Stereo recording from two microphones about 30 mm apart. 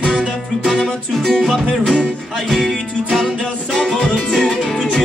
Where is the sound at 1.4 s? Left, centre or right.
Centre.